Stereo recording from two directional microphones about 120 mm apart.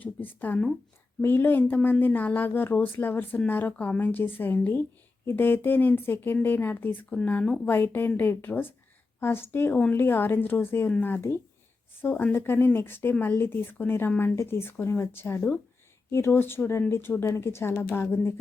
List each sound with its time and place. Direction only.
0.0 s speech: 15° left (ahead or behind)